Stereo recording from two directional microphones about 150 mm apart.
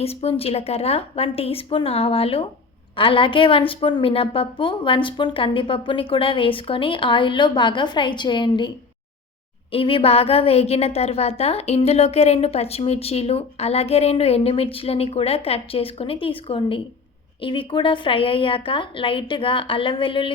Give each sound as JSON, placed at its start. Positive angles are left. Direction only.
{"t": 0.0, "sound": "a woman's voice", "side_deg": 40}
{"t": 9.7, "sound": "a woman's voice", "side_deg": 35}